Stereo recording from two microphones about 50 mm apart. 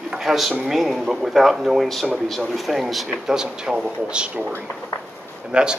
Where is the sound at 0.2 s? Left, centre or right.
Centre.